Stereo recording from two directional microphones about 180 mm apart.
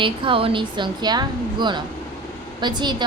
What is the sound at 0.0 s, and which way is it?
A woman's voice, 30° right (ahead or behind).